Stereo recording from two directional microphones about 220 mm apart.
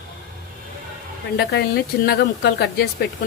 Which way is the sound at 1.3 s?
45° left (ahead or behind).